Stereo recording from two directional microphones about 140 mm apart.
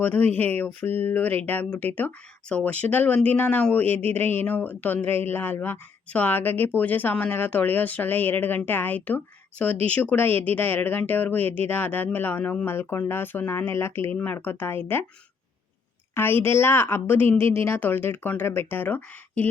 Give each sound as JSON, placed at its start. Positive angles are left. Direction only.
{"t": 0.0, "sound": "speech", "side_deg": 10}
{"t": 16.1, "sound": "speech", "side_deg": 15}